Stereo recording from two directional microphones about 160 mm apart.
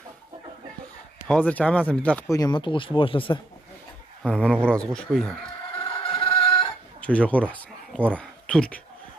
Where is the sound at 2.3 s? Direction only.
25° left (ahead or behind).